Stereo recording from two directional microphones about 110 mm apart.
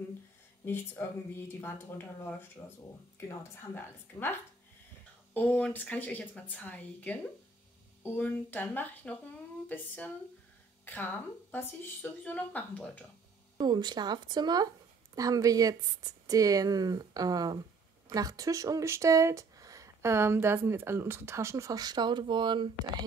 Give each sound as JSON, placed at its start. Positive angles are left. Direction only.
{"t": 0.7, "sound": "speech", "side_deg": 20}
{"t": 5.3, "sound": "a woman's voice", "side_deg": 15}
{"t": 13.6, "sound": "speech", "side_deg": -40}